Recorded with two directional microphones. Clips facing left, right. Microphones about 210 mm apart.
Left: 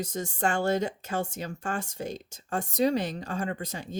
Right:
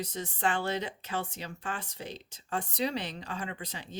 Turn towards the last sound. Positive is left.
turn(degrees=45)  # may be behind; listen again after turning